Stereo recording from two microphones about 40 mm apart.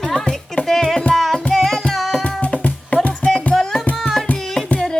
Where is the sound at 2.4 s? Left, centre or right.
Left.